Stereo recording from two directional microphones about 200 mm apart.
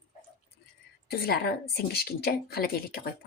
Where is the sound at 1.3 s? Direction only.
50° left (ahead or behind).